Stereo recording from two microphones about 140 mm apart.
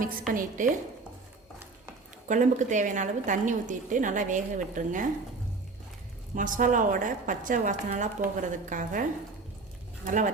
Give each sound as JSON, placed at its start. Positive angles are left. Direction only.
{"t": 0.0, "sound": "a woman's voice", "side_deg": -70}
{"t": 2.2, "sound": "a woman's voice", "side_deg": -65}
{"t": 6.3, "sound": "a woman's voice", "side_deg": -70}
{"t": 10.1, "sound": "a woman's voice", "side_deg": -65}